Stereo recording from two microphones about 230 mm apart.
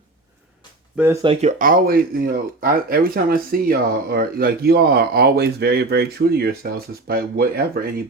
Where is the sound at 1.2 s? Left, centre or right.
Right.